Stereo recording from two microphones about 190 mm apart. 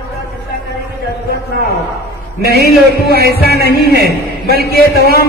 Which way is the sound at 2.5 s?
55° left (ahead or behind).